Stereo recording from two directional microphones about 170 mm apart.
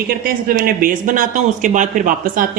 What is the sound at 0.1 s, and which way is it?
Speech, 60° right (ahead or behind).